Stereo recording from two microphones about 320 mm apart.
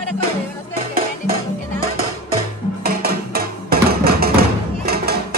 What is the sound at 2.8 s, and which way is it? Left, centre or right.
Music, right.